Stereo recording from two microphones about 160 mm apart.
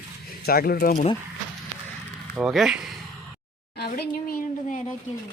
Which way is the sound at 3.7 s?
85° left.